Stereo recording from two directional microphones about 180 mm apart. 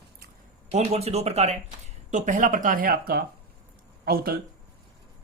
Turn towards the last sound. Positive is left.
turn(degrees=-55)  # may be behind; listen again after turning